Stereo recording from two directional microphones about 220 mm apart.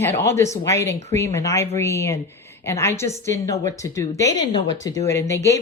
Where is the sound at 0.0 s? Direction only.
10° left (ahead or behind).